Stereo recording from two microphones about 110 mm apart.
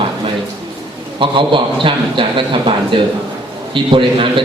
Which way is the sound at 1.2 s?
50° right (ahead or behind).